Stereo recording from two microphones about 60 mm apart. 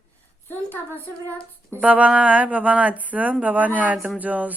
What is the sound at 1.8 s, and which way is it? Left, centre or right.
Speech, right.